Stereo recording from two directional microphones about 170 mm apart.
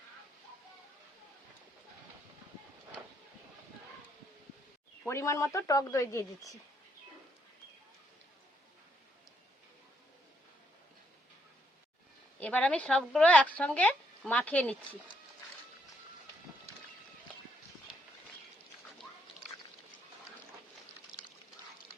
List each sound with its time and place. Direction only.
5.0 s speech: 15° left (ahead or behind)
12.4 s speech: 10° left (ahead or behind)
21.1 s duck: 25° left (ahead or behind)